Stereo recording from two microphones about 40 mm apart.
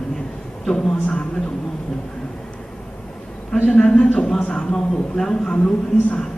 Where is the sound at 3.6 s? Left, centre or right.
Left.